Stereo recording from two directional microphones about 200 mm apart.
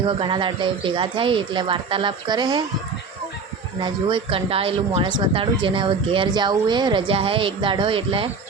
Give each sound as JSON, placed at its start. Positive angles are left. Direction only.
{"t": 0.2, "sound": "speech", "side_deg": -25}
{"t": 3.8, "sound": "speech", "side_deg": -25}